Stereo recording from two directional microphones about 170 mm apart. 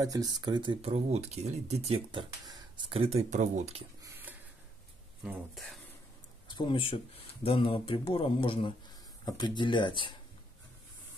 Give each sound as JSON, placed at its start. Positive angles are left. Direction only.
{"t": 0.0, "sound": "speech", "side_deg": -20}
{"t": 4.0, "sound": "a sound", "side_deg": -10}
{"t": 5.2, "sound": "speech", "side_deg": 0}
{"t": 6.4, "sound": "speech", "side_deg": 30}